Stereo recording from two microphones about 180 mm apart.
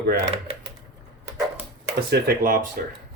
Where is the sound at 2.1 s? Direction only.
50° right (ahead or behind).